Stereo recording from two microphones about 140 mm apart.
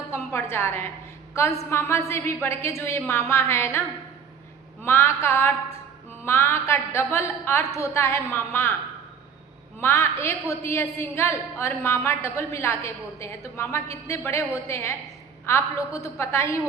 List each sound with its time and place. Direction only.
0.1 s a sound: 20° left (ahead or behind)
1.3 s a woman's voice: 20° left (ahead or behind)
9.8 s a woman's voice: 20° left (ahead or behind)